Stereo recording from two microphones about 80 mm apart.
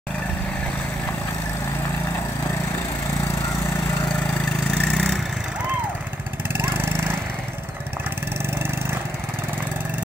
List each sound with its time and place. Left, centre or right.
4.9 s vehicle: centre
6.5 s lawn mower: right